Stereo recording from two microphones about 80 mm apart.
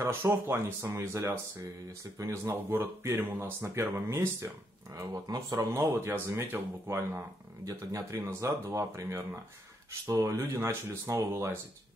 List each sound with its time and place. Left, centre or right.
0.3 s speech: right
2.5 s speech: right
4.9 s speech: right
5.7 s speech: right
7.6 s speech: right
8.3 s speech: right